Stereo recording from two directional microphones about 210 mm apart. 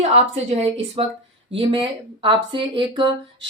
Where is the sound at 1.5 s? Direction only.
25° right (ahead or behind).